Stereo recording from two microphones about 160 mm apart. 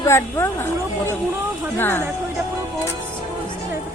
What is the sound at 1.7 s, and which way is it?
Speech, 15° left (ahead or behind).